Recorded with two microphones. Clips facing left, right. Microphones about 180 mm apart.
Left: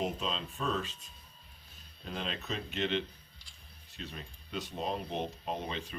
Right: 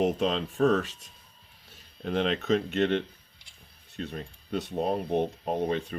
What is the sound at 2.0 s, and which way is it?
Speech, 70° right (ahead or behind).